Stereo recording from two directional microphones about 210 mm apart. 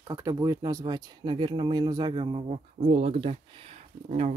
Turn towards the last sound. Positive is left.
turn(degrees=-30)  # may be behind; listen again after turning